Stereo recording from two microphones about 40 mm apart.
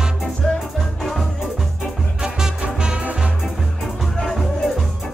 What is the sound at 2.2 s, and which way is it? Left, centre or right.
Music, right.